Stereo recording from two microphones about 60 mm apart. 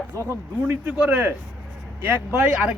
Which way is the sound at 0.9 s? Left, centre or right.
Right.